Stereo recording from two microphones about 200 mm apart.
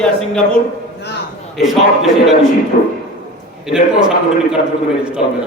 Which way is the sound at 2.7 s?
50° left (ahead or behind).